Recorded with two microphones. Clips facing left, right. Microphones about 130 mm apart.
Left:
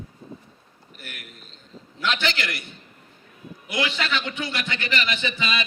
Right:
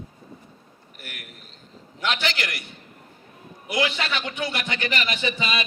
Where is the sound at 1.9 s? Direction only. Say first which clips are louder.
Left 1 dB; 25° right (ahead or behind).